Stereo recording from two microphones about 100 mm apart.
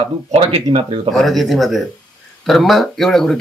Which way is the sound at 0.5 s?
80° right.